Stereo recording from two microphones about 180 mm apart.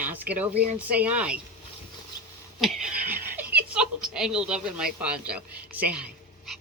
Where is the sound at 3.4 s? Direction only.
10° right (ahead or behind).